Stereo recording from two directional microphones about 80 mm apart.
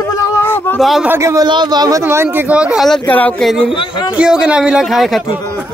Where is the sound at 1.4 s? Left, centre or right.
Right.